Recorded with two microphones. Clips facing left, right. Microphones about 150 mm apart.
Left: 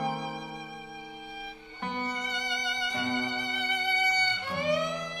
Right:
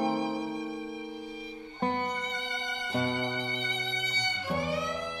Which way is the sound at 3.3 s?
70° left (ahead or behind).